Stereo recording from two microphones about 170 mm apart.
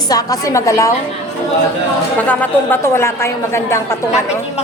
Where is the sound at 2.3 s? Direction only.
10° left (ahead or behind).